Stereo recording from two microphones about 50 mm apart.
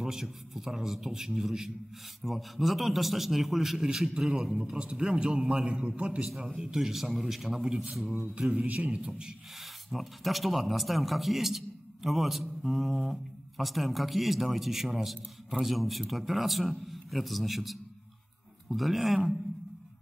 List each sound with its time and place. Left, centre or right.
0.0 s a man's voice: centre
5.7 s a man's voice: right
6.2 s a man's voice: centre
9.8 s speech: centre